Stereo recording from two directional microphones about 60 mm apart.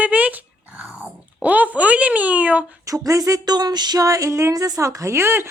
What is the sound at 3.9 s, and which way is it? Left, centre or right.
Music, right.